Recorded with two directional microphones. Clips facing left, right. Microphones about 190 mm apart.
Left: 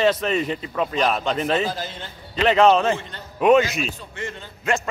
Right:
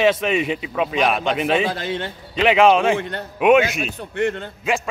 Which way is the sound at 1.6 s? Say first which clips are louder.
Right 4 dB; 70° right (ahead or behind).